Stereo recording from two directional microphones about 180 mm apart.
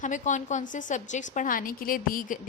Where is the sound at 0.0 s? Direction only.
45° left (ahead or behind).